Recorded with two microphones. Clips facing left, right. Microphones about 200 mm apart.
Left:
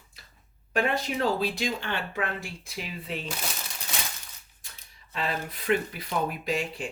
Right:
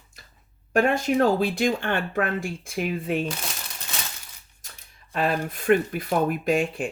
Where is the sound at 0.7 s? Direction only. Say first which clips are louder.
Right 7 dB; 50° right (ahead or behind).